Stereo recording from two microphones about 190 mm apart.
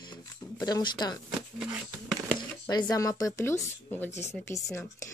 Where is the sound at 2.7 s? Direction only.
20° left (ahead or behind).